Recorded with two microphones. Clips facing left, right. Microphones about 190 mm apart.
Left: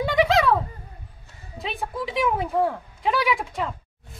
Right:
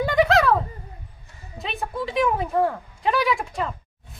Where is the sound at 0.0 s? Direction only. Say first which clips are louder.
Right 1 dB; centre (ahead or behind).